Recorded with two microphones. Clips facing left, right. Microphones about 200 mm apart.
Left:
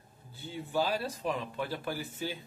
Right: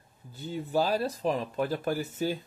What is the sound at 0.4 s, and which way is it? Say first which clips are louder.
A man's voice: right 4 dB; 40° right (ahead or behind).